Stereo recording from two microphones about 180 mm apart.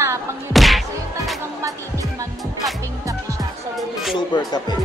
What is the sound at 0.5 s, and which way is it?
Whack, centre (ahead or behind).